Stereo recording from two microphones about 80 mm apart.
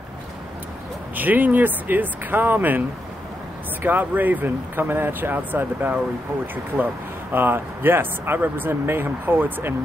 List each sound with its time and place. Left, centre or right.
1.1 s speech: right
3.8 s speech: right